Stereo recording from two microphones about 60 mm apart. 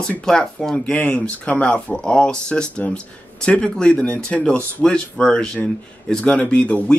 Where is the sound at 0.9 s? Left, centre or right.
Left.